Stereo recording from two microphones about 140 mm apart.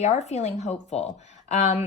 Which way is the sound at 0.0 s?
55° left (ahead or behind).